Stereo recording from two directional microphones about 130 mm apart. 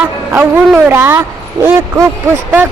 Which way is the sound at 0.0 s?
10° right (ahead or behind).